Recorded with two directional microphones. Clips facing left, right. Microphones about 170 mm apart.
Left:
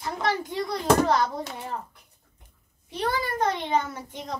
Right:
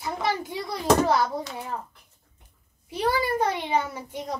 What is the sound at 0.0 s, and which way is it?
A child's voice, 10° right (ahead or behind).